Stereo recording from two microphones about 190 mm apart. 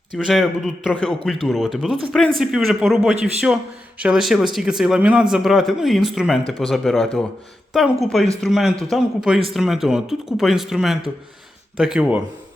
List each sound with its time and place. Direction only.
0.3 s speech: centre (ahead or behind)